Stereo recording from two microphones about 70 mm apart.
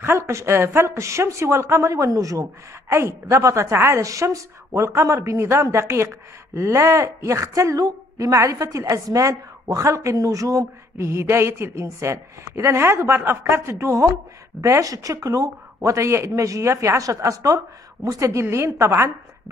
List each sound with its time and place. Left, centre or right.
0.0 s a woman's voice: right
2.9 s a woman's voice: right